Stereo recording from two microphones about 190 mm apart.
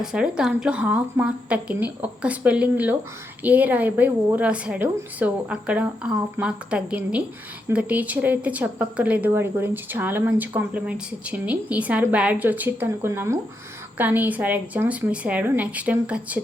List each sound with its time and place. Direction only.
0.0 s speech: 5° right (ahead or behind)